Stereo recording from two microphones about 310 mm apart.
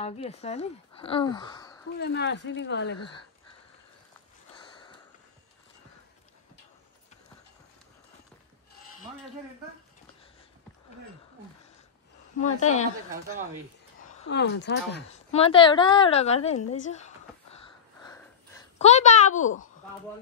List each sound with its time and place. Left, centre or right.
0.0 s speech: centre
2.0 s speech: left
4.6 s sniff: centre
12.4 s a woman's voice: left
14.2 s speech: left
15.3 s a woman's voice: centre
18.0 s a sound: centre
18.8 s a woman's voice: left